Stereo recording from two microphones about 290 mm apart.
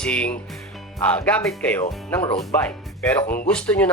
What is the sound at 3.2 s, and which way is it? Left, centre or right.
Speech, left.